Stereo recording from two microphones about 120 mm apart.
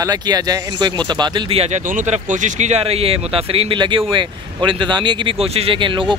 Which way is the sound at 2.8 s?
55° right (ahead or behind).